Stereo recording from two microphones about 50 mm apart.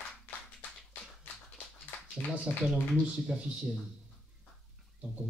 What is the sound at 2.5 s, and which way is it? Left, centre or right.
Speech, left.